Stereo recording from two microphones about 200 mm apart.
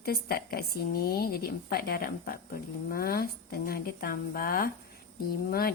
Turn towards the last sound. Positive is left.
turn(degrees=50)  # may be behind; listen again after turning